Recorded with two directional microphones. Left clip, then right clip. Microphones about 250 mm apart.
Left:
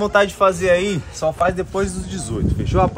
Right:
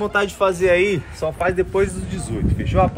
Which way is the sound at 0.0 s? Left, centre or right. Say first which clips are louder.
Left 4 dB; centre.